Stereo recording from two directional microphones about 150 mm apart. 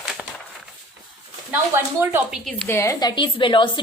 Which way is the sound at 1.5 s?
15° right (ahead or behind).